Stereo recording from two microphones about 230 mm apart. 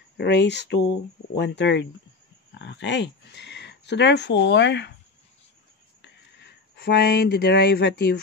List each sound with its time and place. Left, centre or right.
0.2 s speech: left
6.0 s speech: left